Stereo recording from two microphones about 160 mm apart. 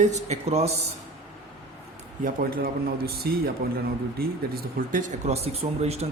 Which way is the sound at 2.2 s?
65° right (ahead or behind).